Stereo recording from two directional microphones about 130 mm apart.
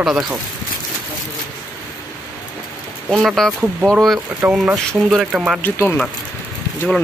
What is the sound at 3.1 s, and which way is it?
Speech, centre (ahead or behind).